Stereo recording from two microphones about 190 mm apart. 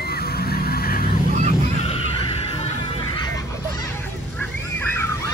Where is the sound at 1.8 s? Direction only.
30° left (ahead or behind).